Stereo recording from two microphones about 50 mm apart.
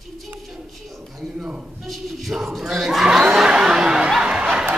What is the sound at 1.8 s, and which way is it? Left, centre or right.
Chuckle, centre.